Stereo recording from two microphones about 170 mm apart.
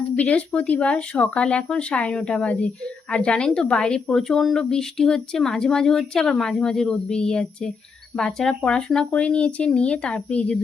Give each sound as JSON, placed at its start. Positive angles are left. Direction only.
{"t": 0.2, "sound": "speech", "side_deg": 10}